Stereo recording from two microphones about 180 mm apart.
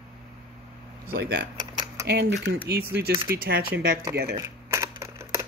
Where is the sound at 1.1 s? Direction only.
65° right (ahead or behind).